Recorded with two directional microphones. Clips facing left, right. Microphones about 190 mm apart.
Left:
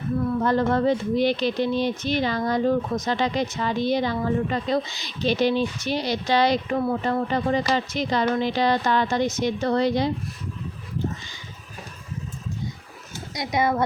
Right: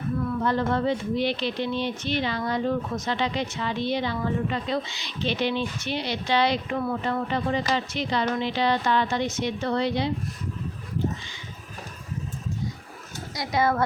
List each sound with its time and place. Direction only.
0.4 s speech: 45° left (ahead or behind)
13.3 s speech: 20° left (ahead or behind)